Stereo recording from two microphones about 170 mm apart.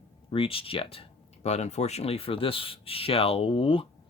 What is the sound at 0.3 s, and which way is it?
Speech, 30° left (ahead or behind).